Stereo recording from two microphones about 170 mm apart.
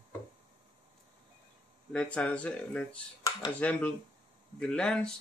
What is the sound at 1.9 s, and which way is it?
Speech, 5° left (ahead or behind).